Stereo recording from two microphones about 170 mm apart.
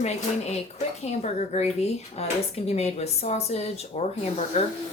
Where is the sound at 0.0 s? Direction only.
40° left (ahead or behind).